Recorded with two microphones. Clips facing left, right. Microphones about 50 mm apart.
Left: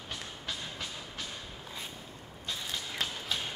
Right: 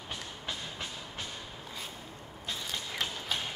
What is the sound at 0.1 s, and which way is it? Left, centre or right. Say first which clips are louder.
Train: right 1 dB; centre.